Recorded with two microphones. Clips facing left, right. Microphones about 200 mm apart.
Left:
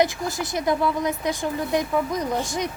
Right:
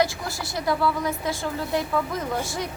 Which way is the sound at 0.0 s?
20° left (ahead or behind).